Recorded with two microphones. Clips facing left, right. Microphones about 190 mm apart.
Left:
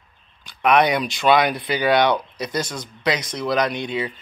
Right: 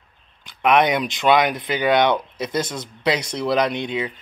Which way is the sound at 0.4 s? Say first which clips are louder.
Even; 20° right (ahead or behind).